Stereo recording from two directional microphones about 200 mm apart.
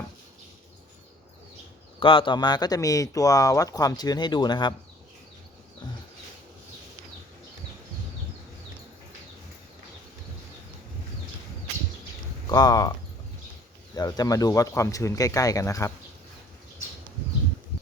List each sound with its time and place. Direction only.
2.0 s speech: 25° left (ahead or behind)
12.5 s speech: 20° left (ahead or behind)
13.9 s speech: 20° left (ahead or behind)